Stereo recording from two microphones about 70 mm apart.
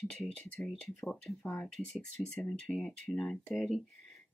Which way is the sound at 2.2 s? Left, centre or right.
Centre.